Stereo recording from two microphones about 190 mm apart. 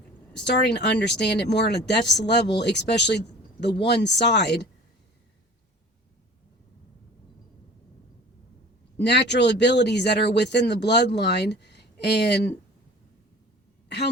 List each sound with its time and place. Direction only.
0.4 s speech: 65° left (ahead or behind)
9.0 s speech: 60° left (ahead or behind)